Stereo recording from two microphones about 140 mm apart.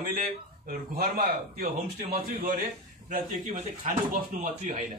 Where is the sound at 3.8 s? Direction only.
65° right (ahead or behind).